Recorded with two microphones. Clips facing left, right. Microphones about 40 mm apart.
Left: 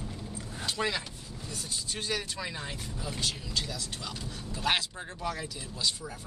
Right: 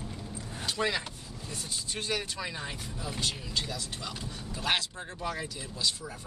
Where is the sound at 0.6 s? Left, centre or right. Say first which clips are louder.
Right 1 dB; centre.